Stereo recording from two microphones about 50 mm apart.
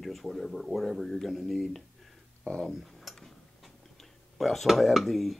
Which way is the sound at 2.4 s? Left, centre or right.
Centre.